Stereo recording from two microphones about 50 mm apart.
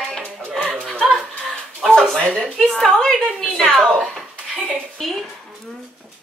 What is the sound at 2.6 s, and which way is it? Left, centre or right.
Speech, centre.